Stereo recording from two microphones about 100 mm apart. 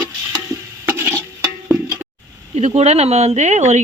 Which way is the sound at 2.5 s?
90° right.